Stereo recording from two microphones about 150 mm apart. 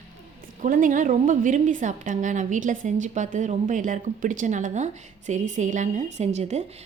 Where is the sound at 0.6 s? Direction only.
65° right (ahead or behind).